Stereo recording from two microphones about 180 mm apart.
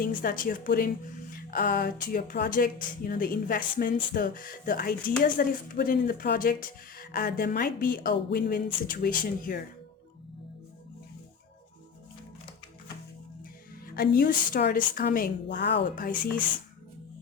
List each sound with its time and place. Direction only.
0.0 s speech: 50° left (ahead or behind)
13.8 s a woman's voice: 55° left (ahead or behind)
15.5 s speech: 65° left (ahead or behind)